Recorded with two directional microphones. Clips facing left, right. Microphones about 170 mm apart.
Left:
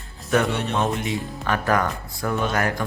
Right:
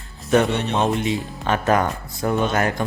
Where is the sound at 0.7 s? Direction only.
25° right (ahead or behind).